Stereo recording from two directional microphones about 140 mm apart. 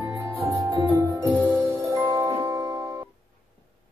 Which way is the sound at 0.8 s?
10° right (ahead or behind).